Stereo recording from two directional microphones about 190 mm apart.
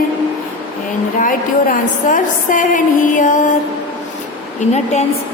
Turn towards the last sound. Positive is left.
turn(degrees=35)  # may be behind; listen again after turning